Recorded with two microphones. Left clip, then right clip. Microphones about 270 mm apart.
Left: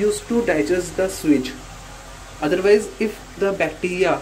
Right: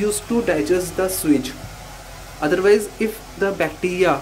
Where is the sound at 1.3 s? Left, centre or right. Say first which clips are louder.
Even; centre.